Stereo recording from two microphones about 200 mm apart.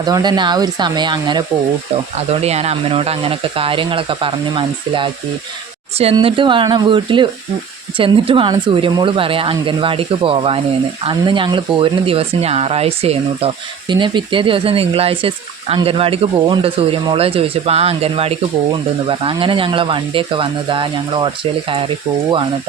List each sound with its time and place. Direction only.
0.0 s speech: 20° right (ahead or behind)